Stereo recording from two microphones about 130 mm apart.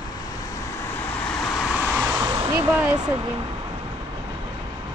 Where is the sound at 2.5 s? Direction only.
30° right (ahead or behind).